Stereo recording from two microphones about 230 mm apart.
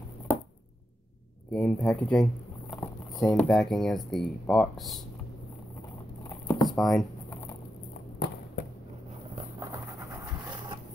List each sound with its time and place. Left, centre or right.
1.5 s speech: centre
6.2 s a sound: centre
6.7 s speech: centre